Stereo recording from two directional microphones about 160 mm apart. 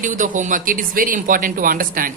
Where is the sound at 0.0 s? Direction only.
55° right (ahead or behind).